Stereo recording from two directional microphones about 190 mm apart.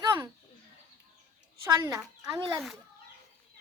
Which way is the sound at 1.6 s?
20° right (ahead or behind).